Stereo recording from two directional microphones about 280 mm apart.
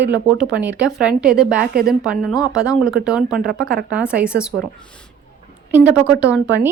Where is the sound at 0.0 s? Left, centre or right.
Centre.